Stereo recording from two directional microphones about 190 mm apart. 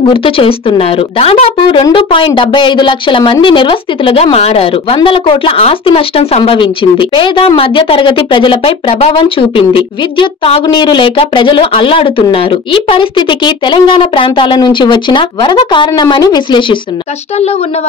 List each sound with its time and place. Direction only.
0.1 s speech: 30° left (ahead or behind)